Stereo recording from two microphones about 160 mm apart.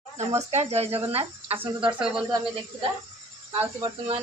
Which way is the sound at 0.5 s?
40° right (ahead or behind).